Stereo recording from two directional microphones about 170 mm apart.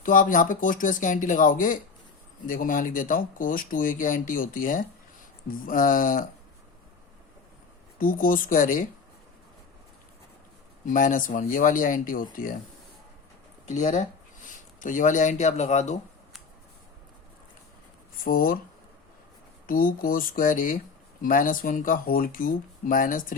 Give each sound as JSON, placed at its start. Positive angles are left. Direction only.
{"t": 0.0, "sound": "speech", "side_deg": 50}
{"t": 7.9, "sound": "speech", "side_deg": 55}
{"t": 10.8, "sound": "speech", "side_deg": 50}
{"t": 13.7, "sound": "speech", "side_deg": 45}
{"t": 18.3, "sound": "speech", "side_deg": 55}
{"t": 19.6, "sound": "speech", "side_deg": 55}